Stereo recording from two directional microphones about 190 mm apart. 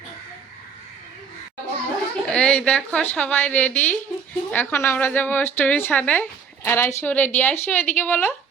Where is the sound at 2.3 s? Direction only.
5° left (ahead or behind).